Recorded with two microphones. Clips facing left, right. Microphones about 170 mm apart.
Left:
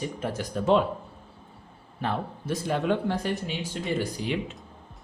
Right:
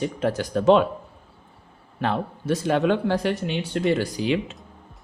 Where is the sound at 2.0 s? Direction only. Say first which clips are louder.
Right 5 dB; 80° right.